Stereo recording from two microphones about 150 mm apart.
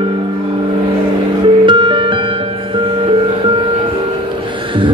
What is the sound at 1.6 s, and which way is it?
Music, 35° right (ahead or behind).